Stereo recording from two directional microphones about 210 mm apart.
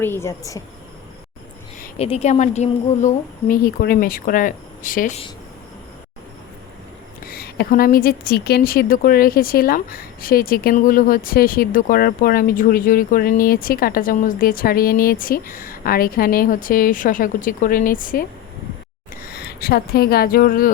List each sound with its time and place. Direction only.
0.0 s a woman's voice: 10° left (ahead or behind)
2.0 s speech: 30° left (ahead or behind)
7.3 s a woman's voice: 45° left (ahead or behind)